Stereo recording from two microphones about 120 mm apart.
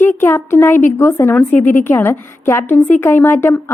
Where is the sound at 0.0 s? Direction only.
20° left (ahead or behind).